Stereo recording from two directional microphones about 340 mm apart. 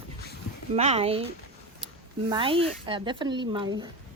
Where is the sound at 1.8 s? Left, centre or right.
Centre.